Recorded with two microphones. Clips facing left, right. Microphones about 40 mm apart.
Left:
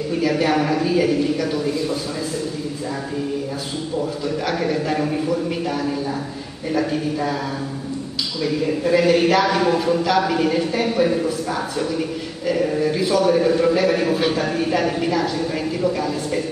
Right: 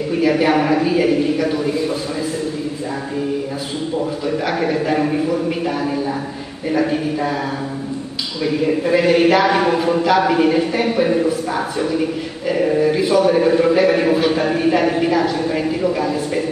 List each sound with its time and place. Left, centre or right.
0.1 s a man's voice: centre
4.5 s speech: centre
6.7 s speech: centre
8.5 s speech: centre